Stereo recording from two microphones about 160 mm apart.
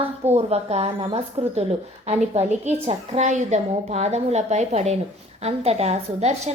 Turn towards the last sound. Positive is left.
turn(degrees=-45)  # may be behind; listen again after turning